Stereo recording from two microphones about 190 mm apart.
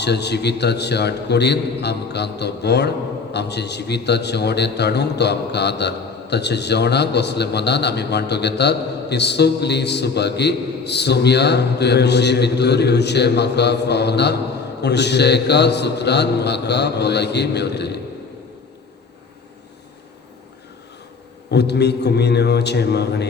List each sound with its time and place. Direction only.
0.0 s a man's voice: 60° left (ahead or behind)
21.5 s a man's voice: 60° left (ahead or behind)